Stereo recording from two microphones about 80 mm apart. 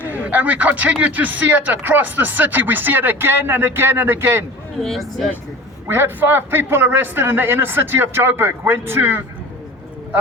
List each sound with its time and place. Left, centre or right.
0.1 s speech: centre
4.8 s speech: centre
5.9 s speech: right